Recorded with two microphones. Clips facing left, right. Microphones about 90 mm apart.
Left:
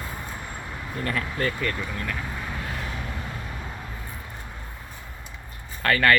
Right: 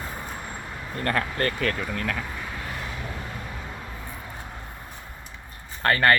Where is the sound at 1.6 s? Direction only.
90° right.